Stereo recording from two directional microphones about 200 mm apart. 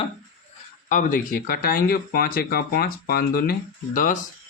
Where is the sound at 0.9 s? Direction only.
40° left (ahead or behind).